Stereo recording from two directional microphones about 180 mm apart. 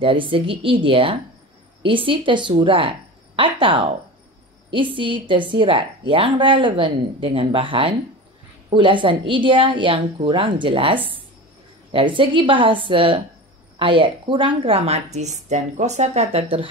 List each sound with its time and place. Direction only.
0.0 s a woman's voice: 30° right (ahead or behind)